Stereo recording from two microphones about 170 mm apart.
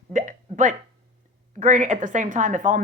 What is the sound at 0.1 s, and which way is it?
Hiccup, 50° right (ahead or behind).